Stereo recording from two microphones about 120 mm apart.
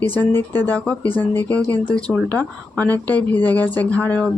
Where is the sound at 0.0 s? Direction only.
15° left (ahead or behind).